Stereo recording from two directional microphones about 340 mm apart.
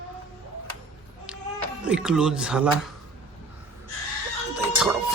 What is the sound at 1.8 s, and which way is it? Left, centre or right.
Speech, centre.